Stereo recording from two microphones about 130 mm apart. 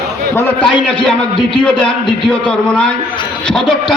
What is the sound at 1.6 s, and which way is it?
A man's voice, 5° left (ahead or behind).